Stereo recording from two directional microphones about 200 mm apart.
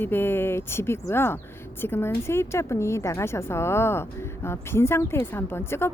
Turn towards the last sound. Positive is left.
turn(degrees=10)  # may be behind; listen again after turning